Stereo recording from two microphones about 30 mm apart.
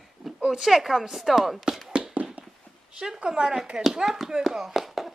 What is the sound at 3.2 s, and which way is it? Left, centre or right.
Speech, right.